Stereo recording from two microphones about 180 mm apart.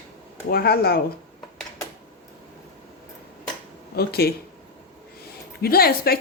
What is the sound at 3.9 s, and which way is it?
Speech, 60° left (ahead or behind).